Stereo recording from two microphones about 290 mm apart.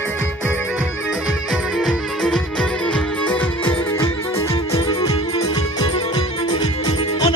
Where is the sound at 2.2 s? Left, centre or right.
Centre.